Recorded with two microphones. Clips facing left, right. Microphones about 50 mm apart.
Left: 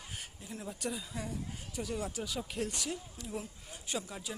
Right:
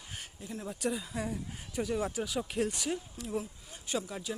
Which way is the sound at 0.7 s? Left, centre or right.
Centre.